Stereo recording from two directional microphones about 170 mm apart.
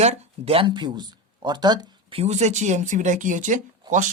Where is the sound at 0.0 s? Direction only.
40° right (ahead or behind).